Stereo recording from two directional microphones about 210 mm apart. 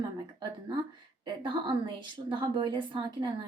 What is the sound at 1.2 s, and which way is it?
Speech, 20° right (ahead or behind).